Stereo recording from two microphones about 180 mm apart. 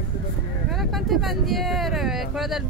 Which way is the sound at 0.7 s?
Centre (ahead or behind).